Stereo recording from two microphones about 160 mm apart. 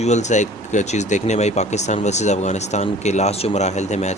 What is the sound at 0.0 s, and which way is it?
Speech, 45° left (ahead or behind).